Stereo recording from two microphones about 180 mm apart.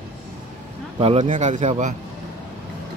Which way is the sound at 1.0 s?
35° right (ahead or behind).